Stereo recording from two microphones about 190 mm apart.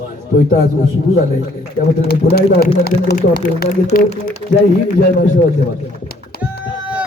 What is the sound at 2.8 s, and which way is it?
Speech, 55° left (ahead or behind).